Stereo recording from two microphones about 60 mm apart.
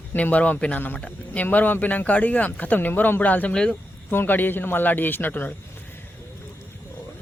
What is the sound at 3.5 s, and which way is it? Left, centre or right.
Speech, centre.